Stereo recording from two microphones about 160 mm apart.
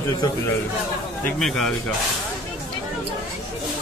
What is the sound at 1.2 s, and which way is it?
Speech, centre (ahead or behind).